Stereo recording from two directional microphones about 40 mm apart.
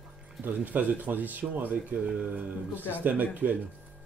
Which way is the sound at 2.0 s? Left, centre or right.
Right.